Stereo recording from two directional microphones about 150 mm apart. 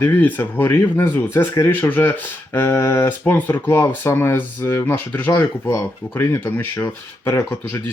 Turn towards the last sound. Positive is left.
turn(degrees=15)  # may be behind; listen again after turning